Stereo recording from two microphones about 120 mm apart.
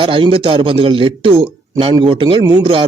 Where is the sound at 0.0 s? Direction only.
45° right (ahead or behind).